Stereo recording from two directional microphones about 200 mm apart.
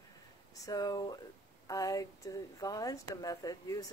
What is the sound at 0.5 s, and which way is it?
Speech, 15° left (ahead or behind).